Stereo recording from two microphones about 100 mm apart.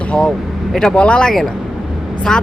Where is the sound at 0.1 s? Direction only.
5° left (ahead or behind).